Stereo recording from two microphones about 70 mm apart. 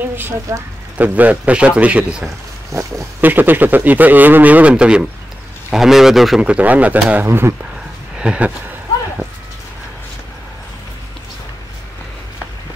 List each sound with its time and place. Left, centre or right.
0.5 s speech: right
0.9 s a man's voice: right
2.7 s speech: right
3.2 s a man's voice: right; by 6.4 s centre
6.4 s a man's voice: centre
7.2 s speech: right
8.2 s a sound: centre